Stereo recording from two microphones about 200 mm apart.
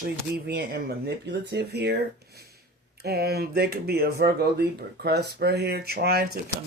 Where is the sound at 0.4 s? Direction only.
50° right (ahead or behind).